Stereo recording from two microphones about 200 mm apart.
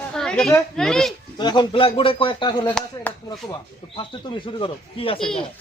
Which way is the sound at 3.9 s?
25° left (ahead or behind).